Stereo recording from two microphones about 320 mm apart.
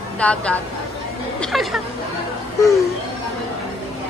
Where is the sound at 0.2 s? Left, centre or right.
Centre.